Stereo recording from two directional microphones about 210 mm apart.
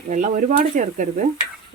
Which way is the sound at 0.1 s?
40° right (ahead or behind).